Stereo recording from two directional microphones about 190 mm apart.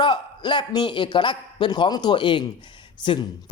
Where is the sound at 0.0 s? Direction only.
25° left (ahead or behind).